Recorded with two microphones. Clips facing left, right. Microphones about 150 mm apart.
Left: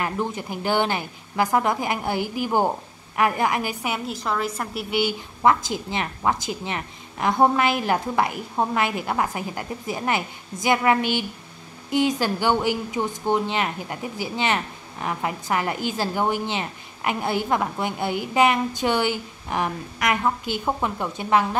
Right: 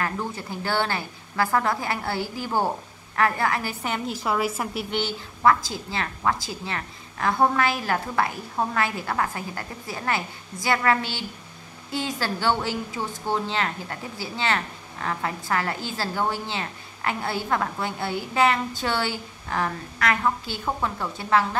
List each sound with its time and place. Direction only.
0.0 s a woman's voice: 20° left (ahead or behind)
4.1 s a woman's voice: 5° right (ahead or behind)
4.9 s a woman's voice: 15° left (ahead or behind)